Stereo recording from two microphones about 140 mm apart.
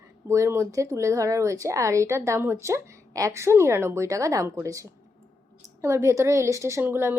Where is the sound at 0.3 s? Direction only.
20° right (ahead or behind).